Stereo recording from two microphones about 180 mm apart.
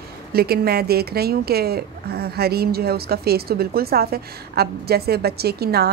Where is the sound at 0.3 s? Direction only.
60° right (ahead or behind).